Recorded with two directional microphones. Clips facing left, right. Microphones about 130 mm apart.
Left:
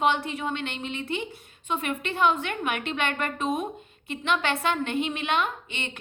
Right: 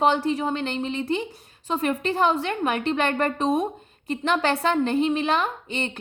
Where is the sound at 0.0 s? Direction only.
35° right (ahead or behind).